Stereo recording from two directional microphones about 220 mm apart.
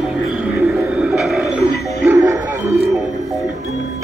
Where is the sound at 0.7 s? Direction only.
5° right (ahead or behind).